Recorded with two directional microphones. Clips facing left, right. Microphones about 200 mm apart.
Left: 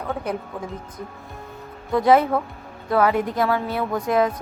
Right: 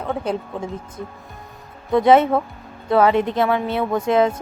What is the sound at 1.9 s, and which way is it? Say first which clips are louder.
Speech: right 3 dB; 25° right (ahead or behind).